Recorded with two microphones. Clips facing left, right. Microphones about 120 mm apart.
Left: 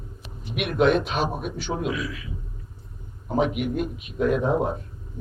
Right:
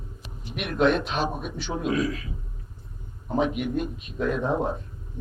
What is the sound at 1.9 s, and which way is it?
Speech, 40° right (ahead or behind).